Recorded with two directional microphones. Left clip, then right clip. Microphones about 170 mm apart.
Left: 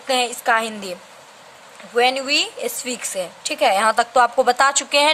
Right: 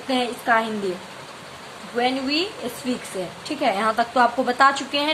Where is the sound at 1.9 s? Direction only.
60° left (ahead or behind).